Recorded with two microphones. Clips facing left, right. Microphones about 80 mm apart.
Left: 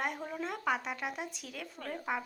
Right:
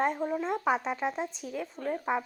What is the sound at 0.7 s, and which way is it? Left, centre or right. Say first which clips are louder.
A woman's voice: right 6 dB; right.